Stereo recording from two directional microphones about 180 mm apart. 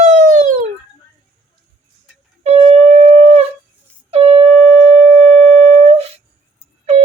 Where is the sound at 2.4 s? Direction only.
35° right (ahead or behind).